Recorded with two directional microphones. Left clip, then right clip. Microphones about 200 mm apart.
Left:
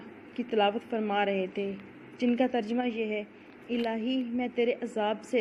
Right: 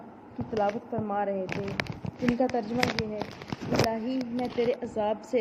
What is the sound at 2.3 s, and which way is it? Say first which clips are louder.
Speech: right 1 dB; 25° left (ahead or behind).